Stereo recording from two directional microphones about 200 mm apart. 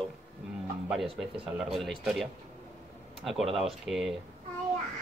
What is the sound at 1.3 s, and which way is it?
Speech, 25° right (ahead or behind).